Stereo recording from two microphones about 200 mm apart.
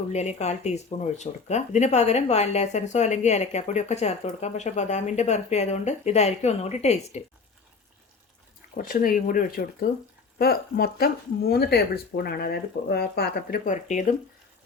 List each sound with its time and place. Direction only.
0.1 s speech: 35° left (ahead or behind)
8.7 s speech: 45° left (ahead or behind)